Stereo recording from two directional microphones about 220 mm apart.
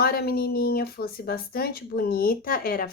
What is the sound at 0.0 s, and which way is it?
Speech, 45° left (ahead or behind).